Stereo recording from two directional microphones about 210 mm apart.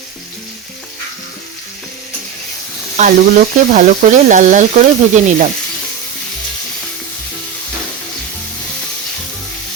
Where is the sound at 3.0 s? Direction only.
40° right (ahead or behind).